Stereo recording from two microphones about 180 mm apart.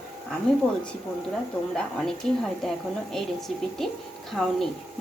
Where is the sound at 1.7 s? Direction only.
5° left (ahead or behind).